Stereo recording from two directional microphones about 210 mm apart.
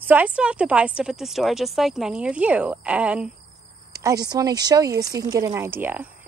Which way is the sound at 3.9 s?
15° right (ahead or behind).